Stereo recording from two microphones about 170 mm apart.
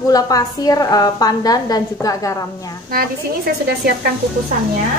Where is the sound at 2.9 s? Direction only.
60° right (ahead or behind).